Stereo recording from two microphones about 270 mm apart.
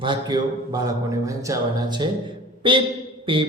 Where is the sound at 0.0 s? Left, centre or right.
Centre.